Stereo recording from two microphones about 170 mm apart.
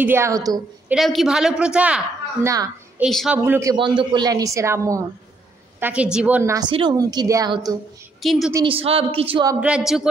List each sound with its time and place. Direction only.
0.0 s a woman's voice: 15° right (ahead or behind)
0.8 s a woman's voice: centre (ahead or behind)
3.4 s a woman's voice: 15° right (ahead or behind)
3.7 s a woman's voice: 30° right (ahead or behind)
8.2 s a woman's voice: centre (ahead or behind)
8.6 s a woman's voice: 35° right (ahead or behind)
9.6 s a woman's voice: 5° right (ahead or behind)